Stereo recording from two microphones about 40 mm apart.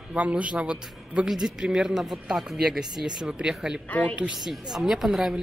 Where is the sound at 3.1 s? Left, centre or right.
Right.